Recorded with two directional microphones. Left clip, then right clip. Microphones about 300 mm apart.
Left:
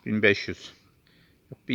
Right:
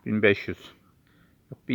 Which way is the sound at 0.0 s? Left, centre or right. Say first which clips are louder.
Even; centre.